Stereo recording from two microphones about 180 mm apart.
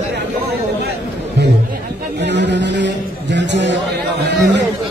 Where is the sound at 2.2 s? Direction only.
75° right (ahead or behind).